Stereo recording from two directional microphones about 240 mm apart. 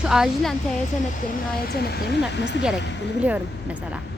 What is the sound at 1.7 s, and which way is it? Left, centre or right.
Speech, left.